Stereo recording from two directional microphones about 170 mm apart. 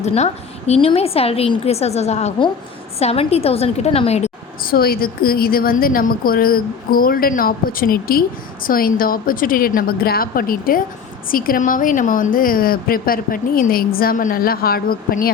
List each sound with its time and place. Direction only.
0.0 s a woman's voice: 40° left (ahead or behind)
4.6 s a woman's voice: 60° left (ahead or behind)